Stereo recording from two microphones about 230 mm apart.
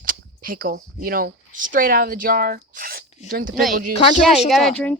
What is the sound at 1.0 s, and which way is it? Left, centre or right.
Speech, right.